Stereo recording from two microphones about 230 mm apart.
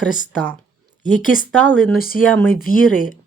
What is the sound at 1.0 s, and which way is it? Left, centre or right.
Speech, left.